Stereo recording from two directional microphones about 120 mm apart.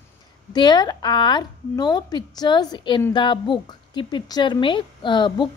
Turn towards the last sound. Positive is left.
turn(degrees=40)  # may be behind; listen again after turning